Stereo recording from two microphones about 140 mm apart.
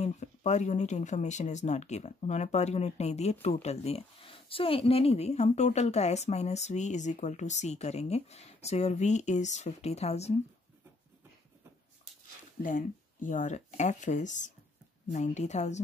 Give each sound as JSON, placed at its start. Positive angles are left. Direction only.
{"t": 0.0, "sound": "speech", "side_deg": 55}
{"t": 12.6, "sound": "speech", "side_deg": 65}